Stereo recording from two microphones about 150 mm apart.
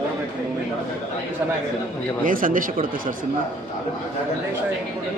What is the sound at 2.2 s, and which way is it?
Speech, 65° right (ahead or behind).